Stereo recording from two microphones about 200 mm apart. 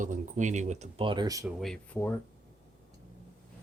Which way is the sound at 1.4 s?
Centre (ahead or behind).